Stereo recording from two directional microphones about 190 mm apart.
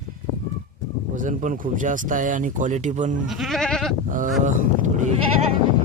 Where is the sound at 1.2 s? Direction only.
40° right (ahead or behind).